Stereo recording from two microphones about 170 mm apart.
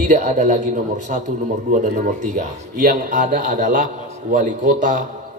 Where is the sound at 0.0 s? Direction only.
45° right (ahead or behind).